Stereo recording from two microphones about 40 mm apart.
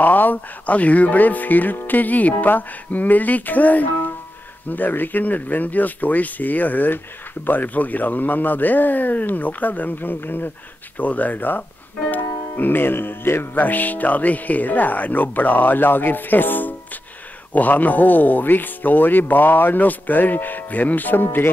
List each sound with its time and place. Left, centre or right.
0.0 s speech: left
11.0 s speech: left
13.6 s speech: left